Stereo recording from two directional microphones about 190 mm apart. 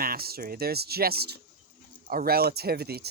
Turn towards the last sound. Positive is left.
turn(degrees=-55)  # may be behind; listen again after turning